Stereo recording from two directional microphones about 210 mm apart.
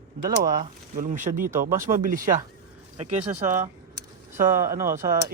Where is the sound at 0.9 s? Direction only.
35° right (ahead or behind).